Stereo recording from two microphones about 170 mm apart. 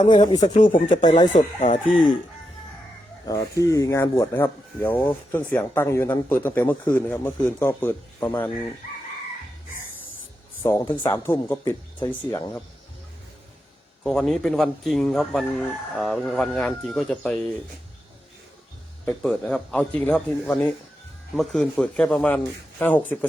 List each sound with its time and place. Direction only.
0.1 s speech: 30° left (ahead or behind)
0.5 s speech: 50° left (ahead or behind)
0.9 s speech: 25° left (ahead or behind)
1.3 s speech: 45° left (ahead or behind)
3.2 s speech: 20° left (ahead or behind)
10.6 s speech: 10° left (ahead or behind)
14.0 s speech: 5° left (ahead or behind)
19.0 s speech: 5° left (ahead or behind)